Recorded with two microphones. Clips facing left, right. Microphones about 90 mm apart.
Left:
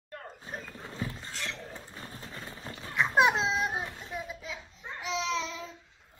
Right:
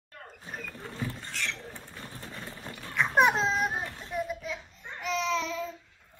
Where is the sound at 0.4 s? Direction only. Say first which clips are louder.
Right 2 dB; 30° left (ahead or behind).